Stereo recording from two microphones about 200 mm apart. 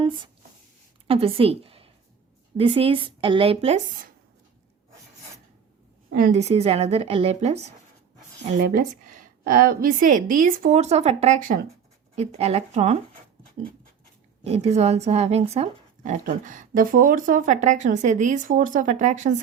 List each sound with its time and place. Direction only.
1.0 s a woman's voice: 30° right (ahead or behind)
6.1 s speech: 45° right (ahead or behind)
8.5 s speech: 45° right (ahead or behind)
14.4 s speech: 30° right (ahead or behind)